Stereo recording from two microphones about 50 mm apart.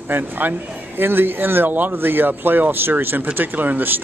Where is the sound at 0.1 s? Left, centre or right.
Right.